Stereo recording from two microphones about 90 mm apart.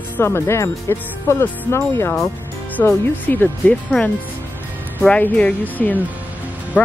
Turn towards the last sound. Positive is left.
turn(degrees=25)  # may be behind; listen again after turning